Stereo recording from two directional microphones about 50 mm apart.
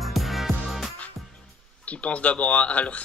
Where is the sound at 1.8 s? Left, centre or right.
Left.